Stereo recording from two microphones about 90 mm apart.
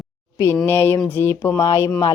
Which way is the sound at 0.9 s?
20° left (ahead or behind).